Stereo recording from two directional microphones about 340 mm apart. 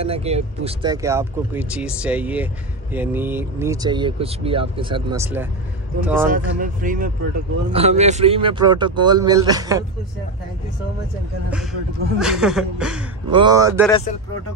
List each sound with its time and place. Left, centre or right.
0.0 s speech: centre
6.3 s speech: right
12.2 s speech: centre
13.3 s speech: centre
13.8 s speech: centre